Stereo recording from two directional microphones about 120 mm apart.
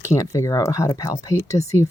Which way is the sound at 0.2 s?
25° left (ahead or behind).